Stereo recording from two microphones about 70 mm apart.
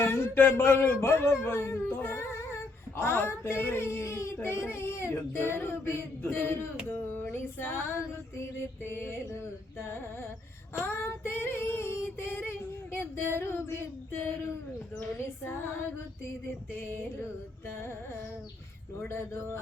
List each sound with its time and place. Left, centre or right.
0.0 s female singing: left
2.0 s humming: left
3.0 s female singing: left
10.8 s female singing: left
16.7 s female singing: left
18.9 s female singing: left